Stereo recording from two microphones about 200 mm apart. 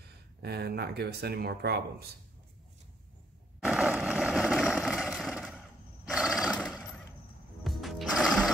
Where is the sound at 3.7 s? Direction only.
5° right (ahead or behind).